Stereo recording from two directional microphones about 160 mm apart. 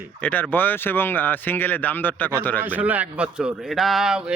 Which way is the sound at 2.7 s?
10° right (ahead or behind).